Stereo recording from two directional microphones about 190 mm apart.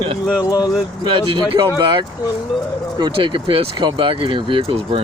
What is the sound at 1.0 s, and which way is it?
Speech, 20° right (ahead or behind).